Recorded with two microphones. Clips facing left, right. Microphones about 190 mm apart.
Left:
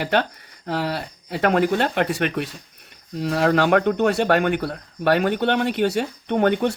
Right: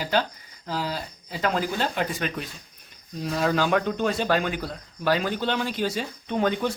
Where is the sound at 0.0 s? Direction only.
60° left (ahead or behind).